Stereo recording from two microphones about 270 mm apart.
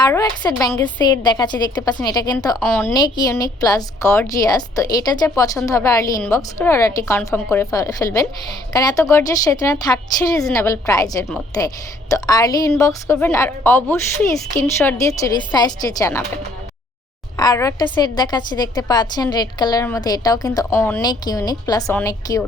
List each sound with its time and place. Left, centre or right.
0.0 s a woman's voice: centre
17.3 s a woman's voice: centre